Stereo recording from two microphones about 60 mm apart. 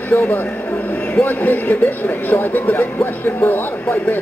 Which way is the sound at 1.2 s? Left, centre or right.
Left.